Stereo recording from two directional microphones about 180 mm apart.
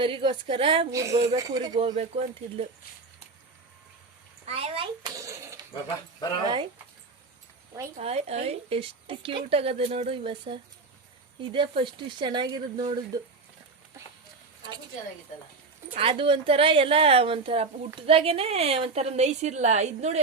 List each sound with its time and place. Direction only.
0.0 s speech: 30° right (ahead or behind)
0.9 s speech: 15° right (ahead or behind)
1.9 s a woman's voice: 35° right (ahead or behind)
4.4 s speech: 35° right (ahead or behind)
7.9 s a woman's voice: 35° right (ahead or behind)
16.0 s a woman's voice: 30° right (ahead or behind)